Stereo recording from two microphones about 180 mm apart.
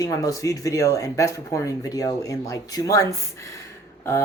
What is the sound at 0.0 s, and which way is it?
Speech, 20° left (ahead or behind).